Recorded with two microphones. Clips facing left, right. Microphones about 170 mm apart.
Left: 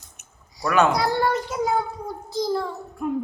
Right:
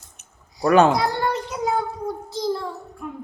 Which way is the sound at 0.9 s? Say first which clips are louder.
Left 1 dB; centre (ahead or behind).